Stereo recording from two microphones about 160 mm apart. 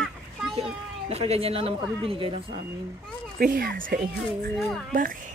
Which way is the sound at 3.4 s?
70° right (ahead or behind).